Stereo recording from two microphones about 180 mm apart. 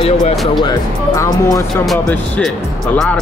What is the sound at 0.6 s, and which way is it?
Speech, 15° left (ahead or behind).